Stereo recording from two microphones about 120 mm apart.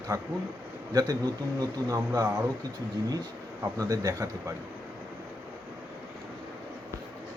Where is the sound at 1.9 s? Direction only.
30° right (ahead or behind).